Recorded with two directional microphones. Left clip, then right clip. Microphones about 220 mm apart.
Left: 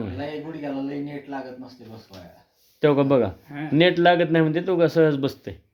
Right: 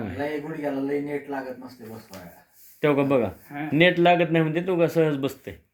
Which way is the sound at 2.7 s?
25° left (ahead or behind).